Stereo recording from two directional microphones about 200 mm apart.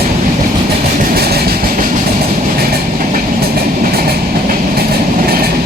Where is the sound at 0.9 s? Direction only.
50° right (ahead or behind).